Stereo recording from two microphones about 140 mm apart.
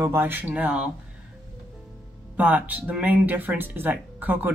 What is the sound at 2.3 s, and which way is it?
Speech, 10° right (ahead or behind).